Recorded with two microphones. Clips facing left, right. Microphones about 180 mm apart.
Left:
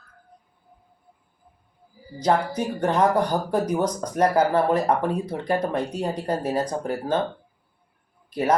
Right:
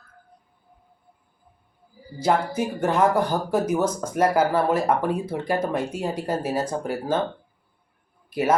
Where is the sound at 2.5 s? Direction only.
10° right (ahead or behind).